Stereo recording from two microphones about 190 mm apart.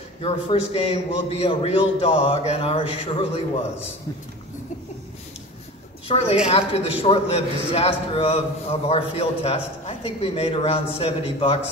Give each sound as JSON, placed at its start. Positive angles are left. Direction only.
{"t": 0.2, "sound": "a man's voice", "side_deg": 30}
{"t": 6.0, "sound": "a woman's voice", "side_deg": 30}